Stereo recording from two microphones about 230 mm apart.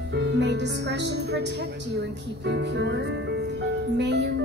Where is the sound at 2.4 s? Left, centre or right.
Right.